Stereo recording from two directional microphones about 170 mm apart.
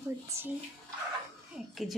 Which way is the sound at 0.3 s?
15° right (ahead or behind).